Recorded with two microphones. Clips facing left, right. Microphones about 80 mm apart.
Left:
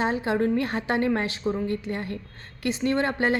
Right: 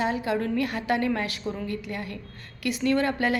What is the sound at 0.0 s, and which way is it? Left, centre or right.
A woman's voice, left.